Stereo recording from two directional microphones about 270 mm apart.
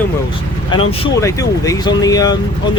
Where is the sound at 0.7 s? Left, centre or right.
Centre.